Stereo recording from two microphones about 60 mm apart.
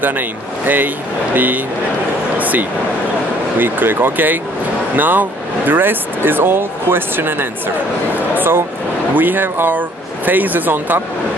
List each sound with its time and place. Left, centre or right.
0.0 s speech: right
2.3 s a sound: right
3.5 s speech: right